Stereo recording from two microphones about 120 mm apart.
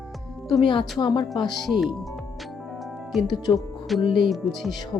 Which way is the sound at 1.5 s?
Centre (ahead or behind).